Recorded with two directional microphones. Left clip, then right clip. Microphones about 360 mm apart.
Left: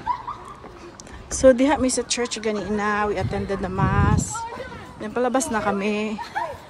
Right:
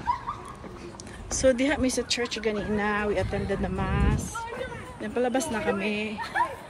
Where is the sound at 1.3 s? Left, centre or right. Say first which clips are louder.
Left 7 dB; centre.